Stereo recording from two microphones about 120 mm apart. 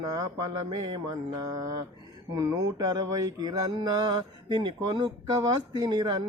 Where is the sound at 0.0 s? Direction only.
30° right (ahead or behind).